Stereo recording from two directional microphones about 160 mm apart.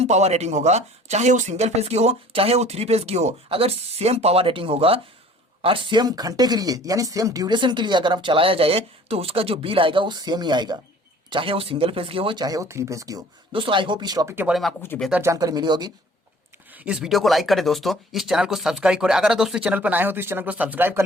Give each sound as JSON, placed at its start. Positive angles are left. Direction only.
{"t": 0.0, "sound": "speech", "side_deg": -40}
{"t": 13.5, "sound": "speech", "side_deg": -30}
{"t": 14.4, "sound": "speech", "side_deg": 0}
{"t": 14.8, "sound": "speech", "side_deg": 15}
{"t": 15.1, "sound": "speech", "side_deg": -20}
{"t": 16.7, "sound": "speech", "side_deg": -5}